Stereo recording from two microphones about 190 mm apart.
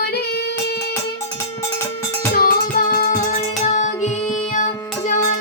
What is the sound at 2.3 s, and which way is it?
Music, 45° left (ahead or behind).